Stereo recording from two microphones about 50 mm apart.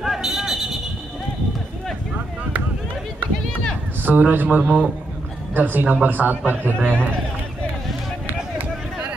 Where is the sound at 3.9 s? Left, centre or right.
Right.